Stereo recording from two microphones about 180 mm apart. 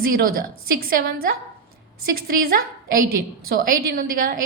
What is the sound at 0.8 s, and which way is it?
Speech, 55° right (ahead or behind).